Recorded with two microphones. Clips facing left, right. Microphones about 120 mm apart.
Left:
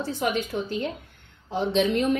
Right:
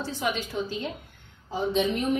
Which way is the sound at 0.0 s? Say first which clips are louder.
Left 3 dB; 55° left (ahead or behind).